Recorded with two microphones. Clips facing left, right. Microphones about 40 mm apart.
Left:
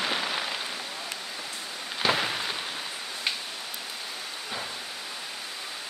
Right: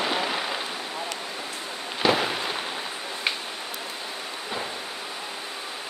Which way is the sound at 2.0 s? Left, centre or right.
Centre.